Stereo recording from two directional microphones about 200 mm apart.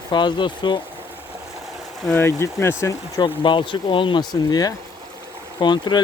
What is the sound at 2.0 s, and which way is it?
Speech, 10° left (ahead or behind).